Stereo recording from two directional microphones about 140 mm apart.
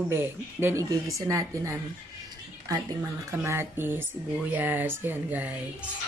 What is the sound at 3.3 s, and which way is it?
Speech, 20° right (ahead or behind).